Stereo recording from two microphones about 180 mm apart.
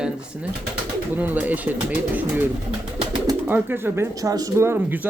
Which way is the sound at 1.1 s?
10° right (ahead or behind).